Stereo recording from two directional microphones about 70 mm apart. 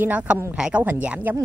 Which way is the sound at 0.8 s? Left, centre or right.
Right.